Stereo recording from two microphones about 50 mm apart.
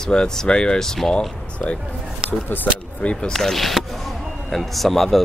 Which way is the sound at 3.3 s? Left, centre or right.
Centre.